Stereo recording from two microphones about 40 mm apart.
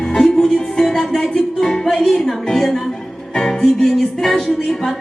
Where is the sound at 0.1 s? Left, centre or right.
Centre.